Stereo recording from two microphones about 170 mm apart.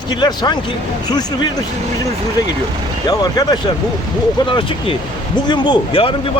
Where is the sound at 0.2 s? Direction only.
25° left (ahead or behind).